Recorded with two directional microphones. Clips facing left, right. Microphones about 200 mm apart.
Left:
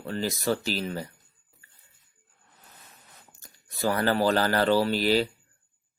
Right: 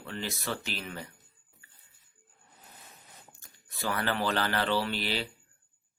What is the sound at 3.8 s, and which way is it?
Speech, 40° left (ahead or behind).